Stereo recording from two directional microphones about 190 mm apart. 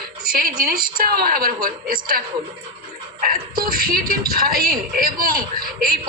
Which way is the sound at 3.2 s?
50° right (ahead or behind).